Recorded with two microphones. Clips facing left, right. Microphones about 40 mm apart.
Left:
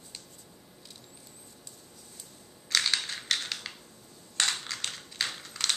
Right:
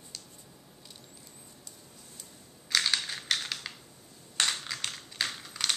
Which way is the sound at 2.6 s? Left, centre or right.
Centre.